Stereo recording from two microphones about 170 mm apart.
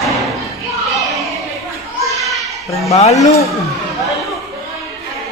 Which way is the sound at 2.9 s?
40° left (ahead or behind).